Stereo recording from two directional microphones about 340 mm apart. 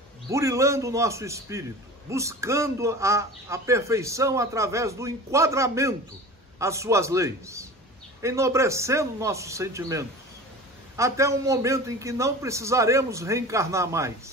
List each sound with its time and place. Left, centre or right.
0.3 s a man's voice: centre